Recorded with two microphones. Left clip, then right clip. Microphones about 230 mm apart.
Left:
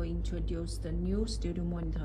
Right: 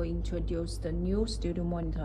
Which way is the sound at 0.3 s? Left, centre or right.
Centre.